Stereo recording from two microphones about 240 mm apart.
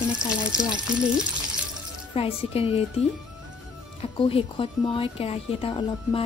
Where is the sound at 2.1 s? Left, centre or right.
Left.